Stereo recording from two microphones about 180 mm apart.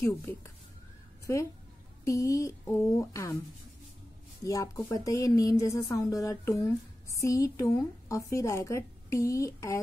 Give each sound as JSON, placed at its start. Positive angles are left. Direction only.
{"t": 0.1, "sound": "a woman's voice", "side_deg": 15}
{"t": 4.4, "sound": "a woman's voice", "side_deg": 20}